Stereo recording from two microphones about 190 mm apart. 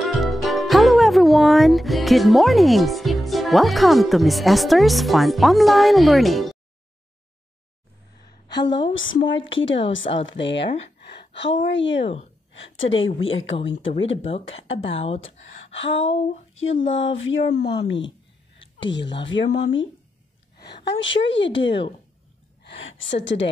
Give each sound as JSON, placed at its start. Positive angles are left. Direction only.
{"t": 0.0, "sound": "speech", "side_deg": 0}
{"t": 8.3, "sound": "a sound", "side_deg": 20}
{"t": 8.9, "sound": "a woman's voice", "side_deg": 90}
{"t": 9.3, "sound": "a sound", "side_deg": 80}
{"t": 10.2, "sound": "a woman's voice", "side_deg": 70}
{"t": 12.0, "sound": "speech", "side_deg": 30}
{"t": 12.5, "sound": "a woman's voice", "side_deg": 90}
{"t": 13.7, "sound": "a sound", "side_deg": 80}
{"t": 14.3, "sound": "speech", "side_deg": 30}
{"t": 15.9, "sound": "a sound", "side_deg": 80}
{"t": 17.6, "sound": "a woman's voice", "side_deg": 60}
{"t": 20.8, "sound": "a woman's voice", "side_deg": 70}
{"t": 22.8, "sound": "a woman's voice", "side_deg": 90}
{"t": 23.2, "sound": "a woman's voice", "side_deg": 70}